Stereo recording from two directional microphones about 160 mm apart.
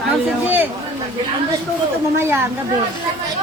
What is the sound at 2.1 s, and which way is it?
Speech, 15° right (ahead or behind).